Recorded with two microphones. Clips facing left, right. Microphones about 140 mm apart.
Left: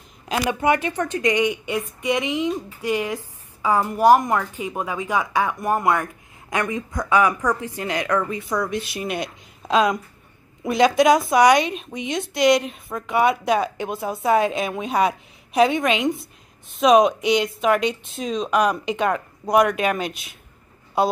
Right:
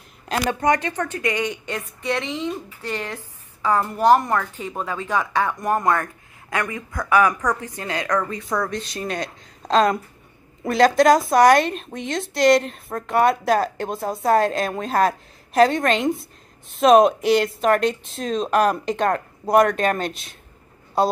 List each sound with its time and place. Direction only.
0.5 s a woman's voice: 15° left (ahead or behind); by 19.6 s 5° right (ahead or behind)